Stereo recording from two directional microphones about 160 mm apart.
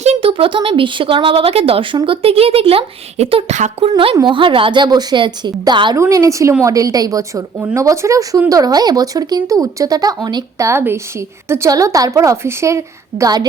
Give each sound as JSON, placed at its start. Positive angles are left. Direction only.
{"t": 0.0, "sound": "speech", "side_deg": -40}